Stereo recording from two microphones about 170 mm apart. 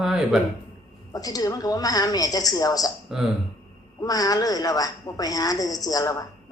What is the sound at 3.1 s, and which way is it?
Speech, 5° right (ahead or behind).